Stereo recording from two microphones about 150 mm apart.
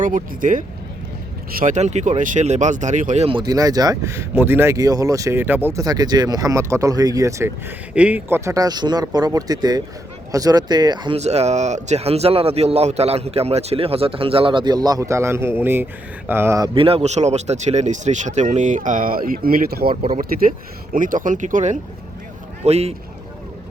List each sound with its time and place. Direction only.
0.0 s speech: 60° right (ahead or behind)
3.2 s speech: 30° right (ahead or behind)
11.2 s a man's voice: 45° right (ahead or behind); by 16.6 s 15° right (ahead or behind)
16.7 s speech: 40° right (ahead or behind); by 19.9 s 85° right
19.9 s a man's voice: 35° right (ahead or behind)
20.9 s speech: 60° right (ahead or behind); by 23.0 s 45° right (ahead or behind)